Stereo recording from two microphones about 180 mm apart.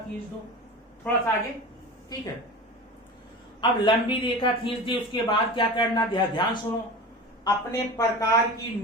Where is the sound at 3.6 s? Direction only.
25° left (ahead or behind).